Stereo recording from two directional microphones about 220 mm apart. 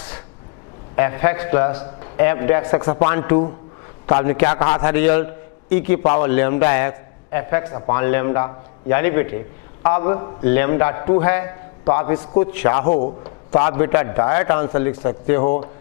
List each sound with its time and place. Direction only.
0.9 s a man's voice: 15° left (ahead or behind)
4.8 s a man's voice: 10° left (ahead or behind)
12.9 s a man's voice: 40° left (ahead or behind)
13.2 s a man's voice: 20° left (ahead or behind)